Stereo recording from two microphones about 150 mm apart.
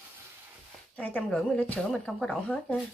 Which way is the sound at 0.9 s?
10° left (ahead or behind).